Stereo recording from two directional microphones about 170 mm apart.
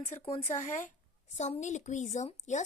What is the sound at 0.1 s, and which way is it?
A woman's voice, 35° left (ahead or behind).